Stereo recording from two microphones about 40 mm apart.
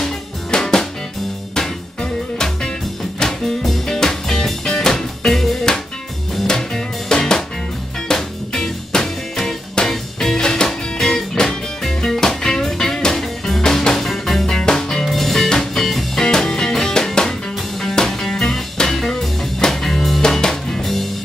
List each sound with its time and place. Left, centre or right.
0.5 s music: centre
6.4 s music: centre
14.4 s music: centre
15.0 s music: centre